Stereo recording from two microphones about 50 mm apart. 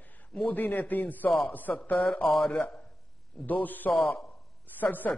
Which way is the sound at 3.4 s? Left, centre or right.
Left.